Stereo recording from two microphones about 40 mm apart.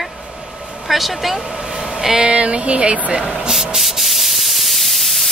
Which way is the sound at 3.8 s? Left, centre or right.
Centre.